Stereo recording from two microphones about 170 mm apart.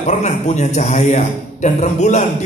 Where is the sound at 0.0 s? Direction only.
45° left (ahead or behind).